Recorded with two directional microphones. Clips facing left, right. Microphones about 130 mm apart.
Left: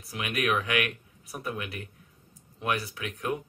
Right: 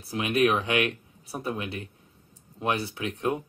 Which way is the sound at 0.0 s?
30° right (ahead or behind).